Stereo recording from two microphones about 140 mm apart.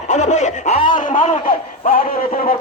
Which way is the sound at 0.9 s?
70° left (ahead or behind).